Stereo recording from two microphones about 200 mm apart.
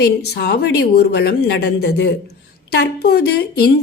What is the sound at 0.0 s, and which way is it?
A woman's voice, 55° left (ahead or behind).